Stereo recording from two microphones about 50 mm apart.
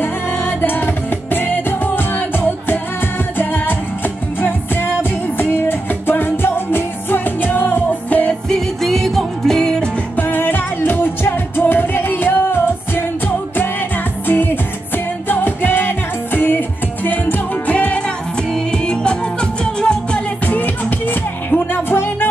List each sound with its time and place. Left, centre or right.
0.0 s music: left
8.5 s music: centre
10.1 s music: left; by 20.2 s centre
20.4 s music: left